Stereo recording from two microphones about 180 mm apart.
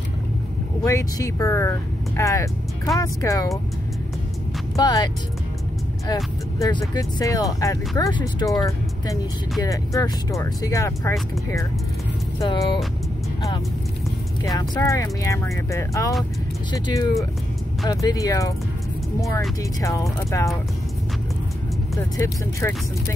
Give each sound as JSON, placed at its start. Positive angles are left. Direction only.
{"t": 0.8, "sound": "speech", "side_deg": 15}
{"t": 4.7, "sound": "speech", "side_deg": 20}
{"t": 12.4, "sound": "speech", "side_deg": 30}
{"t": 14.4, "sound": "speech", "side_deg": 20}
{"t": 19.8, "sound": "speech", "side_deg": 15}
{"t": 21.9, "sound": "speech", "side_deg": 15}